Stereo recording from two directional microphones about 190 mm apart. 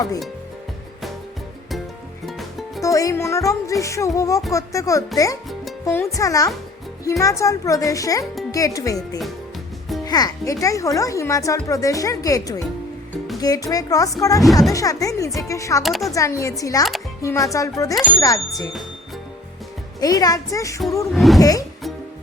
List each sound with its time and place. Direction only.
2.2 s music: centre (ahead or behind)
2.8 s speech: 15° left (ahead or behind)
9.0 s speech: centre (ahead or behind)
10.1 s speech: 20° left (ahead or behind)
15.8 s speech: centre (ahead or behind)
16.1 s a woman's voice: 15° left (ahead or behind)
20.0 s a woman's voice: 20° left (ahead or behind)
21.1 s speech: centre (ahead or behind)